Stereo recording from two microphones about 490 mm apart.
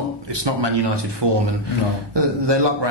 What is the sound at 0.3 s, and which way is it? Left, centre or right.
Speech, right.